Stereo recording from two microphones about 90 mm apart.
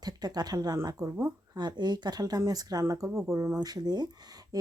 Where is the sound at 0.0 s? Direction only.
45° right (ahead or behind).